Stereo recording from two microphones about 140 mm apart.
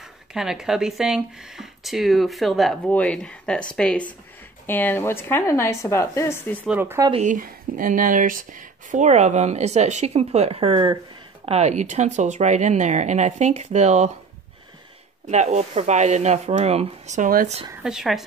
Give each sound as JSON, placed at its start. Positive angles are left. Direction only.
{"t": 0.3, "sound": "a woman's voice", "side_deg": -5}
{"t": 6.7, "sound": "speech", "side_deg": -15}
{"t": 7.2, "sound": "speech", "side_deg": -70}
{"t": 11.4, "sound": "speech", "side_deg": -50}
{"t": 15.2, "sound": "speech", "side_deg": -55}
{"t": 17.8, "sound": "speech", "side_deg": -5}